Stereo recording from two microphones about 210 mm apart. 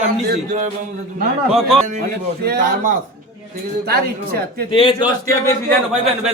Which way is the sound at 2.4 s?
50° right (ahead or behind).